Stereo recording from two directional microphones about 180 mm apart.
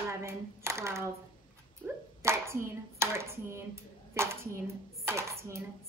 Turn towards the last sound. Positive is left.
turn(degrees=-15)  # may be behind; listen again after turning